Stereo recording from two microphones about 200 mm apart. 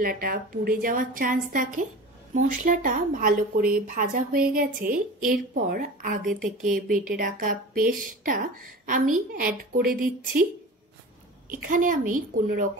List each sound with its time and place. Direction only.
0.0 s a woman's voice: 45° right (ahead or behind)
11.4 s a woman's voice: 45° right (ahead or behind)